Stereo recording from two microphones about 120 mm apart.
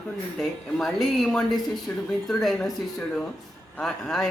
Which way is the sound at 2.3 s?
5° left (ahead or behind).